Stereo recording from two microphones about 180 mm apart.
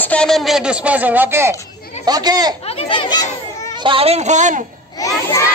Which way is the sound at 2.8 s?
25° left (ahead or behind).